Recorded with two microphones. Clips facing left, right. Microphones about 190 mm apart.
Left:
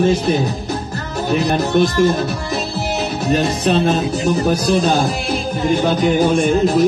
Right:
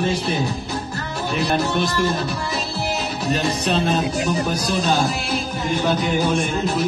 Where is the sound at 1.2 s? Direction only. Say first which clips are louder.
Left 4 dB; 45° left (ahead or behind).